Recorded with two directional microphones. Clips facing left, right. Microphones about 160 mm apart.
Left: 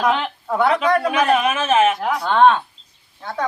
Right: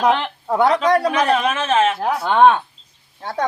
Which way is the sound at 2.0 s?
30° right (ahead or behind).